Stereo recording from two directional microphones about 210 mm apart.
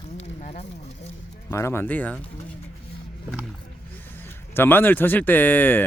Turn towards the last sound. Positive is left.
turn(degrees=10)  # may be behind; listen again after turning